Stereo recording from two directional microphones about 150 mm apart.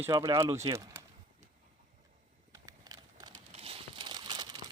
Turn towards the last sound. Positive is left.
turn(degrees=-30)  # may be behind; listen again after turning